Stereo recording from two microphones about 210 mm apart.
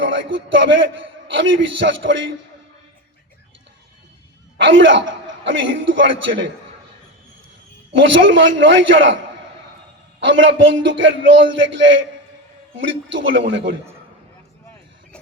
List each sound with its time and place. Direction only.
0.0 s a man's voice: 60° right (ahead or behind)
4.6 s a man's voice: 60° right (ahead or behind)
7.9 s a man's voice: 60° right (ahead or behind)